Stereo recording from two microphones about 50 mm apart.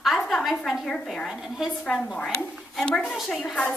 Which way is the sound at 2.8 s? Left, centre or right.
Centre.